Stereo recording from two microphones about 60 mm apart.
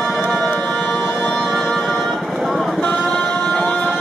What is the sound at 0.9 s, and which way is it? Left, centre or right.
Music, left.